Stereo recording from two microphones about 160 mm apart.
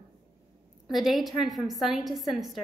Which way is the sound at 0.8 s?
Centre (ahead or behind).